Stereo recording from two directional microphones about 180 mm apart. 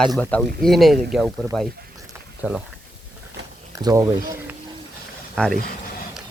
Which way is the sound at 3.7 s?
20° right (ahead or behind).